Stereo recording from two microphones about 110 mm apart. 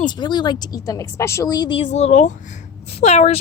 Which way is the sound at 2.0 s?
90° left.